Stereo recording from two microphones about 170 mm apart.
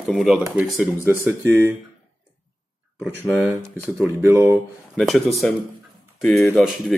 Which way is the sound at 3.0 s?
15° right (ahead or behind).